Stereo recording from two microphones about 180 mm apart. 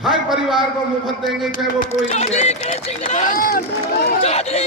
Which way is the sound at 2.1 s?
40° left (ahead or behind).